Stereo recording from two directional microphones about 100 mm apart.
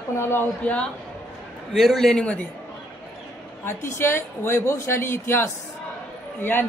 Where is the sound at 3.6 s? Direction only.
25° left (ahead or behind).